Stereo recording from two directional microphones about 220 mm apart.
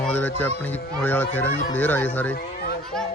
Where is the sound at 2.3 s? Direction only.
45° left (ahead or behind).